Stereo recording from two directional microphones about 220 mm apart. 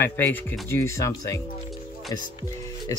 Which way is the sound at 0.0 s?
10° left (ahead or behind).